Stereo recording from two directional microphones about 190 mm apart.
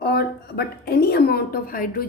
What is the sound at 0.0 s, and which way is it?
A woman's voice, 60° left (ahead or behind).